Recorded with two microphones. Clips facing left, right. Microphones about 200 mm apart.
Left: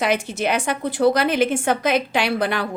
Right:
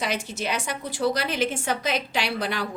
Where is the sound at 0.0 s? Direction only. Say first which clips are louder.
Left 7 dB; 55° left (ahead or behind).